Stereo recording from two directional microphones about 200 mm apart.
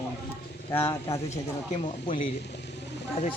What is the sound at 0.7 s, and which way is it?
Speech, 10° left (ahead or behind).